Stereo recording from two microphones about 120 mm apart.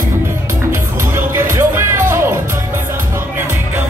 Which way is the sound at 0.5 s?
20° right (ahead or behind).